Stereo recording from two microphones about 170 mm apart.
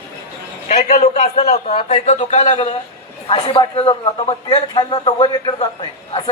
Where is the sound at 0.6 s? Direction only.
50° left (ahead or behind).